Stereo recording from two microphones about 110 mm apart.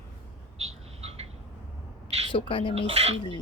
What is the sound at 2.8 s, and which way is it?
Speech, 70° right (ahead or behind).